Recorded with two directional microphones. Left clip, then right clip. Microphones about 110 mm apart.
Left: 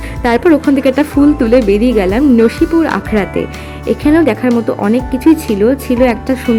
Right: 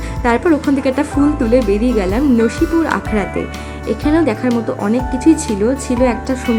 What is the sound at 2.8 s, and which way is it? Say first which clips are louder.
Speech: left 3 dB; 45° left (ahead or behind).